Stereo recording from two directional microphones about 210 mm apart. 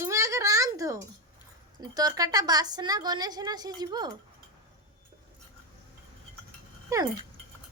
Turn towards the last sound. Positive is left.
turn(degrees=-15)  # may be behind; listen again after turning